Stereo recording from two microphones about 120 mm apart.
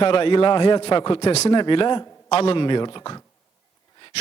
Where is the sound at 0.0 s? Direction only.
50° left (ahead or behind).